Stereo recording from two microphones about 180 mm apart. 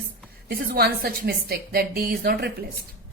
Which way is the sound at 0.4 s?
60° right (ahead or behind).